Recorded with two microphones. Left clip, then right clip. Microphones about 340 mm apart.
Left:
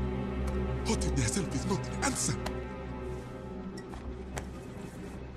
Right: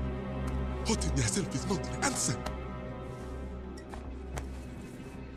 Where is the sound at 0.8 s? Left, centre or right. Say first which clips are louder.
Right 1 dB; centre.